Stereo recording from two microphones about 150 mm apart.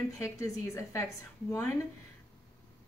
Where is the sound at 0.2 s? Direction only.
20° left (ahead or behind).